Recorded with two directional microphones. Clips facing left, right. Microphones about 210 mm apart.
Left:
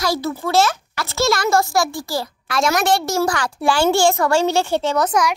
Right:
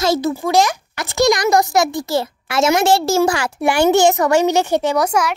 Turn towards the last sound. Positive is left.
turn(degrees=-10)  # may be behind; listen again after turning